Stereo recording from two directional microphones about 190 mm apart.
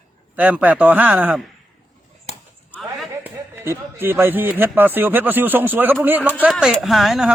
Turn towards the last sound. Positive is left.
turn(degrees=0)  # may be behind; listen again after turning